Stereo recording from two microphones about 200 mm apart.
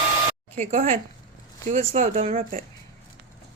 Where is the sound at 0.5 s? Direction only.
35° right (ahead or behind).